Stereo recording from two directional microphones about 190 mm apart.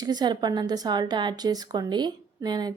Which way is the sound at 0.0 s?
20° right (ahead or behind).